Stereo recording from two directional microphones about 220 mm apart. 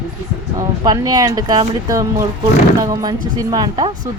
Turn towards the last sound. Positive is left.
turn(degrees=-20)  # may be behind; listen again after turning